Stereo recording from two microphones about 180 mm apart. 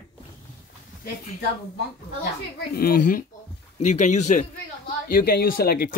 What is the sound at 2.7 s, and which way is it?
Speech, 55° left (ahead or behind).